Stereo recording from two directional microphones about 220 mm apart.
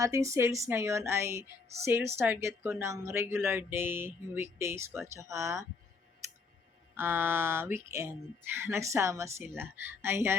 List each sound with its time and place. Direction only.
0.0 s a woman's voice: 15° right (ahead or behind)
6.2 s a sound: 15° right (ahead or behind)
6.9 s a woman's voice: 10° right (ahead or behind)